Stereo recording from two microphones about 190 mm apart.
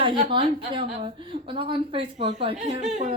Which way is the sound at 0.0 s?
25° right (ahead or behind).